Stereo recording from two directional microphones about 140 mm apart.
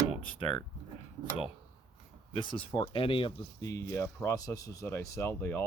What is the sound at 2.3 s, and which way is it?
Speech, 35° left (ahead or behind).